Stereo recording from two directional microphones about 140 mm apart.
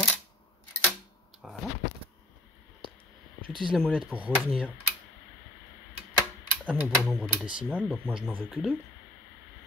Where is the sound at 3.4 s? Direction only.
35° right (ahead or behind).